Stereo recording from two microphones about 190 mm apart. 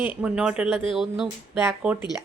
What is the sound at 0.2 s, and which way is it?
Speech, 5° right (ahead or behind).